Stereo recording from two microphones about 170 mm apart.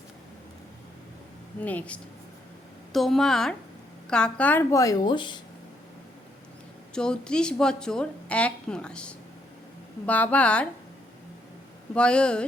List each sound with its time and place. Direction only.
1.6 s a woman's voice: 10° left (ahead or behind); by 5.4 s 25° left (ahead or behind)
6.9 s a woman's voice: 5° left (ahead or behind)
11.9 s a woman's voice: 5° left (ahead or behind)